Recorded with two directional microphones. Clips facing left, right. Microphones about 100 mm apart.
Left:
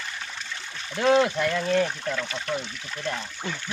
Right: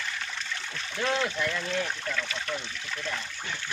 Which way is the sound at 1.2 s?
40° left (ahead or behind).